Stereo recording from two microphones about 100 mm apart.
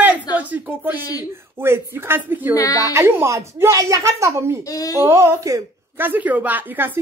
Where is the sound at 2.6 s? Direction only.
35° left (ahead or behind).